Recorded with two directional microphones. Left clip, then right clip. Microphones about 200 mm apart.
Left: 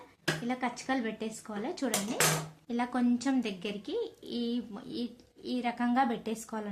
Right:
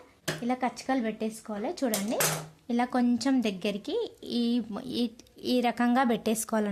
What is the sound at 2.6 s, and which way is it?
Speech, 45° right (ahead or behind).